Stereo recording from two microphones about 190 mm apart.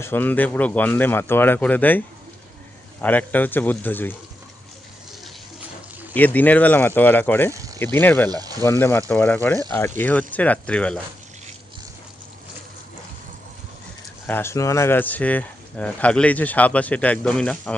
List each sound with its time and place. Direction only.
0.0 s speech: 10° left (ahead or behind)
6.1 s speech: 10° left (ahead or behind)
7.5 s a sound: 15° right (ahead or behind)
7.8 s speech: 10° left (ahead or behind)
8.3 s speech: 20° right (ahead or behind)
8.6 s speech: 15° left (ahead or behind)
14.3 s speech: 10° left (ahead or behind)